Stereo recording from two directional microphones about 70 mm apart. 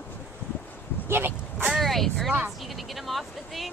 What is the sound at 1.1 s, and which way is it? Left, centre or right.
Vehicle, right.